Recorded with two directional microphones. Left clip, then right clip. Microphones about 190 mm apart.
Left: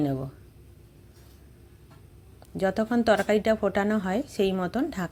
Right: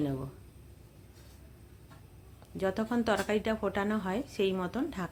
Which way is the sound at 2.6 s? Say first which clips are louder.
Left 6 dB; 25° left (ahead or behind).